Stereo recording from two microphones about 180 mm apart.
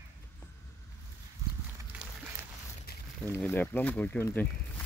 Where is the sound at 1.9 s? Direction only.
5° right (ahead or behind).